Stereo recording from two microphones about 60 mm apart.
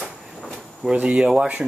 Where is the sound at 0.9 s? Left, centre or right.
Right.